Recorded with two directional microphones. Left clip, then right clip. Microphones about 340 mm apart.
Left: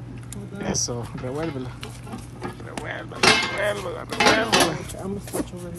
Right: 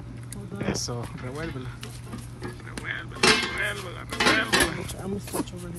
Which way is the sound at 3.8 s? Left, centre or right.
Centre.